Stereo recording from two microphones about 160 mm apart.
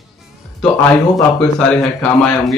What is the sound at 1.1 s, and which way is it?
A man's voice, 5° left (ahead or behind).